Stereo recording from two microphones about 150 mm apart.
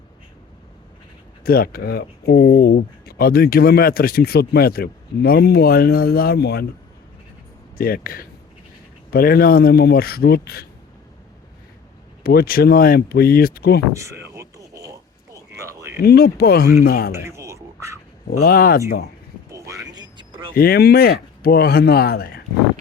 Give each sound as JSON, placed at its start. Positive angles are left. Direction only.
{"t": 1.5, "sound": "speech", "side_deg": 80}
{"t": 7.8, "sound": "speech", "side_deg": 80}
{"t": 9.0, "sound": "speech", "side_deg": 90}
{"t": 12.2, "sound": "speech", "side_deg": 85}
{"t": 13.9, "sound": "speech", "side_deg": -20}
{"t": 14.3, "sound": "a sound", "side_deg": -20}
{"t": 16.0, "sound": "speech", "side_deg": 90}
{"t": 17.1, "sound": "a sound", "side_deg": -15}
{"t": 18.3, "sound": "speech", "side_deg": 90}
{"t": 19.5, "sound": "vehicle", "side_deg": -20}
{"t": 20.5, "sound": "speech", "side_deg": 90}